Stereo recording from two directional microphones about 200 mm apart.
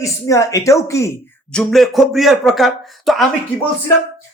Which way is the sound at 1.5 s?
Centre (ahead or behind).